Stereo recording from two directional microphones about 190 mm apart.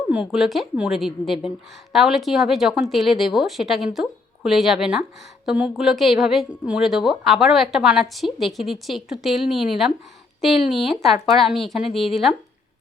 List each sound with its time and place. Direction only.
0.1 s a woman's voice: 5° right (ahead or behind)
11.9 s speech: 30° left (ahead or behind)
12.1 s a woman's voice: centre (ahead or behind)